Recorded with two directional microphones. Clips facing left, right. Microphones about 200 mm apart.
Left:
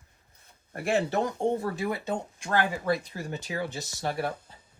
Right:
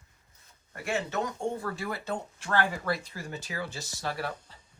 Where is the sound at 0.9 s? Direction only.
35° left (ahead or behind).